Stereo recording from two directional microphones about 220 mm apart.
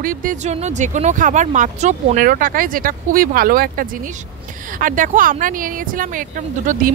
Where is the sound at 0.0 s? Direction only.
40° right (ahead or behind).